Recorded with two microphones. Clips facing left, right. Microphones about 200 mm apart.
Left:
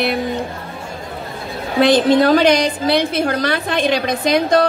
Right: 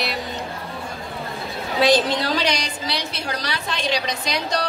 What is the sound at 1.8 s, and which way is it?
A woman's voice, 55° left (ahead or behind).